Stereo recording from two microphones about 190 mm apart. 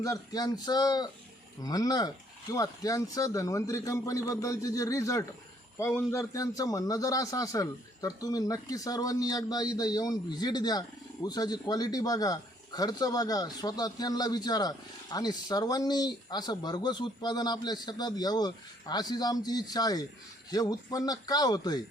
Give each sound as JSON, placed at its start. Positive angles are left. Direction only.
{"t": 0.0, "sound": "a man's voice", "side_deg": 20}